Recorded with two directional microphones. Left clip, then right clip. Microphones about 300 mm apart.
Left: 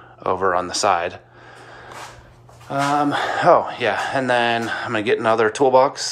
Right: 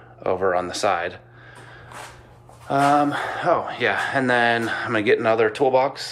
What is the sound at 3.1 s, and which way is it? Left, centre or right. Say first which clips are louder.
Speech: left 6 dB; left.